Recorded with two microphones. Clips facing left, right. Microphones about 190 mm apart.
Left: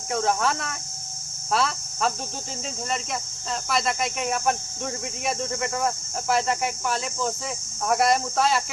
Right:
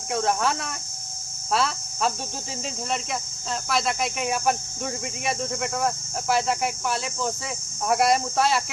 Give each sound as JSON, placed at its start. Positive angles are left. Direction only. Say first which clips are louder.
{"t": 0.1, "sound": "speech", "louder": "even", "side_deg": 0}